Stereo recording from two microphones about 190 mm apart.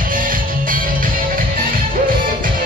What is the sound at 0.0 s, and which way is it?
Music, 45° right (ahead or behind).